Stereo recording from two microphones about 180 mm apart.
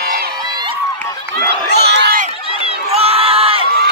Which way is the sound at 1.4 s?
70° right (ahead or behind).